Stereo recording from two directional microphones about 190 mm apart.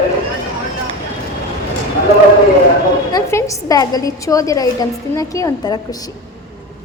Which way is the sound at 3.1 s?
15° left (ahead or behind).